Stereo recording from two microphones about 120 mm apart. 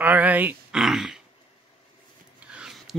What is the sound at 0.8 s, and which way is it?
Speech, 5° right (ahead or behind).